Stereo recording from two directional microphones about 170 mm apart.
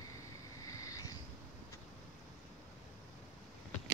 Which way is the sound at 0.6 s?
20° left (ahead or behind).